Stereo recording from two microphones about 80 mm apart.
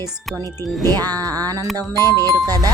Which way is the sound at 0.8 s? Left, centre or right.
Right.